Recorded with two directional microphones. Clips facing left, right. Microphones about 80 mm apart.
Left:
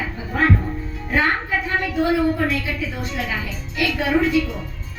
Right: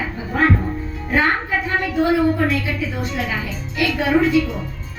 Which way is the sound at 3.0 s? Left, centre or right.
Right.